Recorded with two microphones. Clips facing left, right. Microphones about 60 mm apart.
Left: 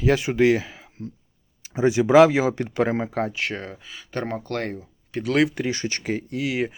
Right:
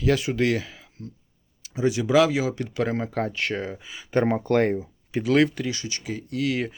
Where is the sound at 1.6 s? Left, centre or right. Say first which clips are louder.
Left 4 dB; left.